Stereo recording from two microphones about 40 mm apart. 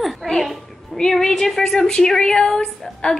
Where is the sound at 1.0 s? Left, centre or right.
Centre.